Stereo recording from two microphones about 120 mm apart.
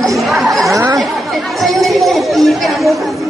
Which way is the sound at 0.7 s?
25° right (ahead or behind).